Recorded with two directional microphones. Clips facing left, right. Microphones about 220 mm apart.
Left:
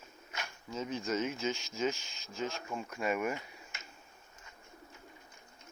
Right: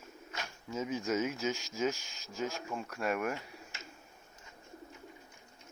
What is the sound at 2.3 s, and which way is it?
Speech, 5° right (ahead or behind).